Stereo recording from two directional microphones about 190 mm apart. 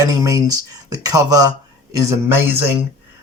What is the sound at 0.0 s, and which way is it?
Speech, 15° right (ahead or behind).